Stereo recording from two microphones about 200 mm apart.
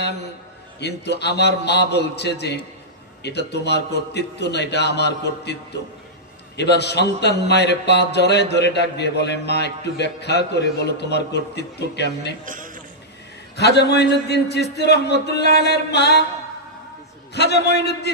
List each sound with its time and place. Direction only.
0.7 s a man's voice: 55° left (ahead or behind)
12.4 s a sound: 40° right (ahead or behind)
13.6 s a man's voice: 55° left (ahead or behind)
17.3 s a man's voice: 55° left (ahead or behind)